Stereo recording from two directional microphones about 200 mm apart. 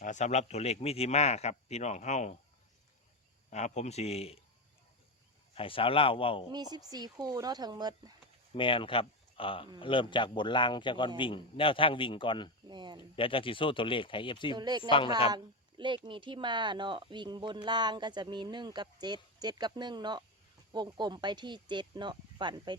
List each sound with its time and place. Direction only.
0.0 s speech: 35° left (ahead or behind)
3.5 s speech: 35° left (ahead or behind)
5.5 s a man's voice: 25° left (ahead or behind)
6.5 s speech: 20° right (ahead or behind)
8.5 s a man's voice: 25° left (ahead or behind)
12.6 s speech: 20° right (ahead or behind)
13.1 s a man's voice: 25° left (ahead or behind)
14.5 s speech: 20° right (ahead or behind)
14.8 s a man's voice: 25° left (ahead or behind)
15.8 s speech: 25° right (ahead or behind)